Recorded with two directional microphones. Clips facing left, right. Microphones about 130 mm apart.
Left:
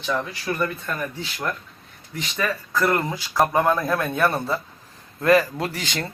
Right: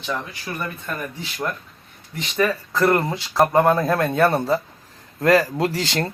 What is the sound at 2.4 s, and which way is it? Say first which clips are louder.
Speech: right 4 dB; 30° right (ahead or behind).